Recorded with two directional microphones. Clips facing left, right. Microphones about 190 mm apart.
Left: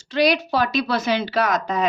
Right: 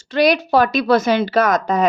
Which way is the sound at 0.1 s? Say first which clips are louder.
Right 4 dB; 50° right (ahead or behind).